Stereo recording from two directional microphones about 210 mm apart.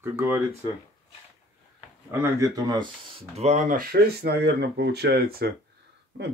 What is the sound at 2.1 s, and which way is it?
Speech, 10° right (ahead or behind).